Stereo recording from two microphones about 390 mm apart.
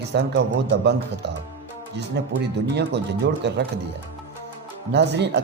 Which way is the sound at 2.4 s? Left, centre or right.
Right.